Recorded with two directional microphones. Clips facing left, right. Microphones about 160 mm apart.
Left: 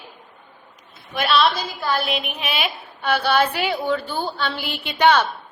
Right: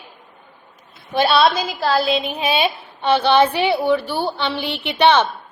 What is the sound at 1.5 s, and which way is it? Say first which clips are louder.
Speech: right 5 dB; 85° right.